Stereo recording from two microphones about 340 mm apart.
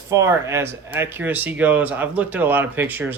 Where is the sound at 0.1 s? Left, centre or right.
Centre.